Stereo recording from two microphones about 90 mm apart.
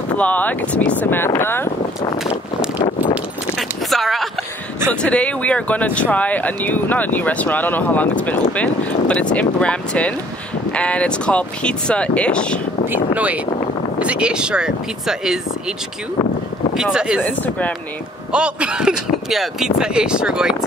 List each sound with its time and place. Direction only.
0.2 s speech: 15° left (ahead or behind)
3.5 s a sound: centre (ahead or behind)
5.0 s speech: 15° left (ahead or behind)
12.8 s speech: 20° right (ahead or behind)
16.7 s speech: 5° right (ahead or behind)
17.2 s speech: 20° left (ahead or behind)
18.3 s speech: 10° right (ahead or behind)